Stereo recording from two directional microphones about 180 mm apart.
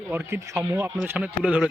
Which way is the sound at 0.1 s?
15° right (ahead or behind).